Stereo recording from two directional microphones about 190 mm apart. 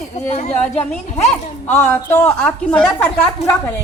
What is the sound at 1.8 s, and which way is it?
A woman's voice, 10° left (ahead or behind).